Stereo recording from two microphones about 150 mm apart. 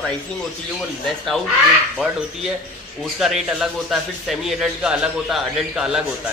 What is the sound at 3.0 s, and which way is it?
A man's voice, centre (ahead or behind).